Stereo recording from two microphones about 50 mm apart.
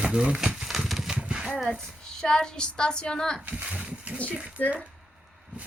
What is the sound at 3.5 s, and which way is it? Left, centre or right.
Speech, right.